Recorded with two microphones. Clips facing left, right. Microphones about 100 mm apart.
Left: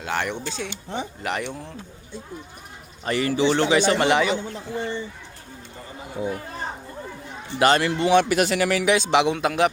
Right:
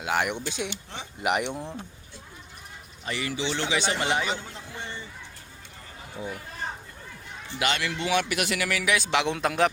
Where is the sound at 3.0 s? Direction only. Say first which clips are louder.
Left 9 dB; 45° left (ahead or behind).